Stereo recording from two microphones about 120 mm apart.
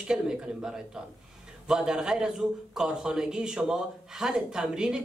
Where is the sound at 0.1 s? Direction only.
5° right (ahead or behind).